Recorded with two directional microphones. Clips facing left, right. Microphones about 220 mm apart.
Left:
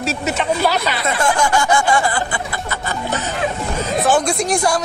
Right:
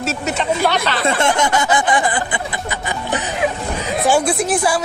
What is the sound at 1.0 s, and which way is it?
Speech, 25° right (ahead or behind).